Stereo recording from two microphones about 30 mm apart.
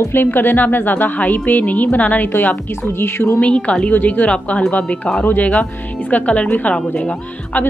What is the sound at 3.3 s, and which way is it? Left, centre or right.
Speech, left.